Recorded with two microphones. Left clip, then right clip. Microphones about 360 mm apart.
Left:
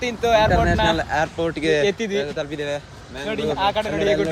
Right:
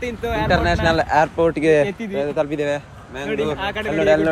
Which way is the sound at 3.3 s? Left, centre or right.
Centre.